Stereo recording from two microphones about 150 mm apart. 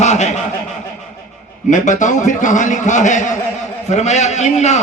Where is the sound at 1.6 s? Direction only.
55° left (ahead or behind).